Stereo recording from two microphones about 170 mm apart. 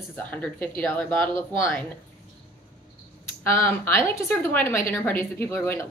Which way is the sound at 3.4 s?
15° left (ahead or behind).